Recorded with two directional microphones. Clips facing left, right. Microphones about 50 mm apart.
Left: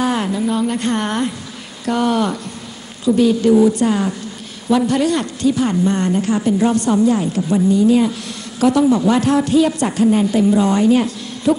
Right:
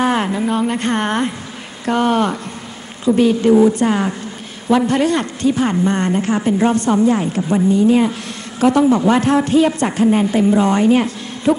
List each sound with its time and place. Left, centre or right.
0.0 s speech: right